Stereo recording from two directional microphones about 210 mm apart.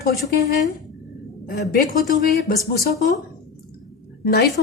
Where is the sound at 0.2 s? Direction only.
45° left (ahead or behind).